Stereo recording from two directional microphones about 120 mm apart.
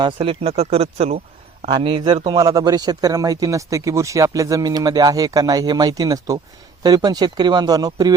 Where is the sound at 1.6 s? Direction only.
40° right (ahead or behind).